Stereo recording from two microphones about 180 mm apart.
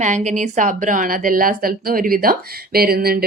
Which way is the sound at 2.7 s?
60° right (ahead or behind).